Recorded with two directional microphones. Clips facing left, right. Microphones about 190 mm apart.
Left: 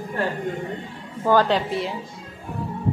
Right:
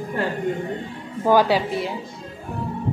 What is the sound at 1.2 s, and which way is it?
Speech, 10° right (ahead or behind).